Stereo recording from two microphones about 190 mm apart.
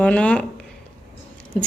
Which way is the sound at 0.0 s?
5° left (ahead or behind).